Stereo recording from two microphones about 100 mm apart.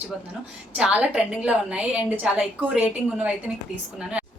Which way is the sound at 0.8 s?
10° right (ahead or behind).